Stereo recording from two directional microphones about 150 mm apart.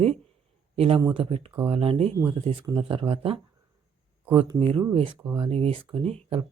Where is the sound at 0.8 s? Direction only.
40° right (ahead or behind).